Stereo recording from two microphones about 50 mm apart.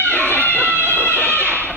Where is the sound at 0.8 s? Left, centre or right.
Left.